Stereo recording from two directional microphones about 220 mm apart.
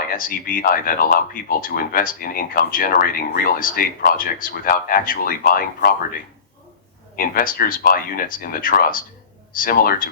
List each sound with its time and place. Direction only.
0.1 s speech: 40° left (ahead or behind)
7.2 s speech: 40° left (ahead or behind)